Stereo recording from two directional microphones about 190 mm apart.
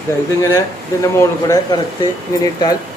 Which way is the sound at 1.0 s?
15° left (ahead or behind).